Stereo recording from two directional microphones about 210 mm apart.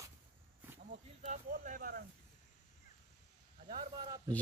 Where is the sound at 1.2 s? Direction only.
35° right (ahead or behind).